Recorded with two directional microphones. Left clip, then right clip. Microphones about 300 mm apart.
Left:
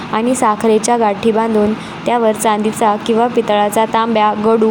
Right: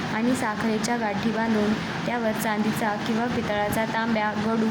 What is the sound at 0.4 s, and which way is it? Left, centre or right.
Speech, centre.